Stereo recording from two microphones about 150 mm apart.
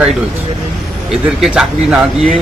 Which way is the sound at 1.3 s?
5° right (ahead or behind).